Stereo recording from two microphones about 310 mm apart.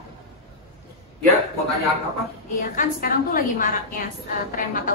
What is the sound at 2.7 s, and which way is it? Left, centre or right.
A woman's voice, left.